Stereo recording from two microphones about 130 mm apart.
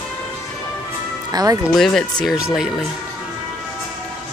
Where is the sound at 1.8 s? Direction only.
5° left (ahead or behind).